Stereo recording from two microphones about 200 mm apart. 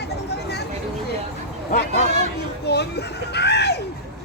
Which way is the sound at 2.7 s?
55° left (ahead or behind).